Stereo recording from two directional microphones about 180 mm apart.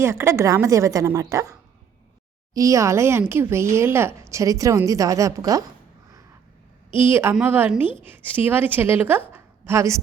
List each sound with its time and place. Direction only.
0.0 s speech: 15° right (ahead or behind)
2.6 s speech: 15° right (ahead or behind)
6.9 s a woman's voice: 15° right (ahead or behind)